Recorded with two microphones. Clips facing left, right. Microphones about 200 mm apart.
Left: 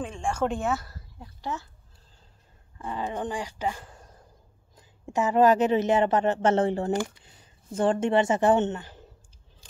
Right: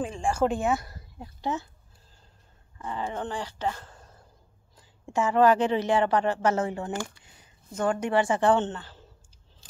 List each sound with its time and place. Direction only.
0.0 s speech: 5° right (ahead or behind); by 1.7 s 20° right (ahead or behind)
2.8 s speech: 15° left (ahead or behind)